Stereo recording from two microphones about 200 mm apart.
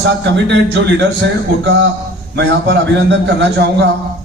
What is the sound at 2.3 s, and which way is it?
A man's voice, 60° right (ahead or behind).